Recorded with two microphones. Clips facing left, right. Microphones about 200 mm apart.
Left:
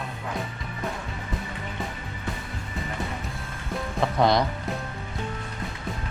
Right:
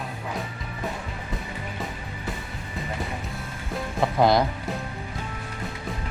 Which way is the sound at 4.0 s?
Centre (ahead or behind).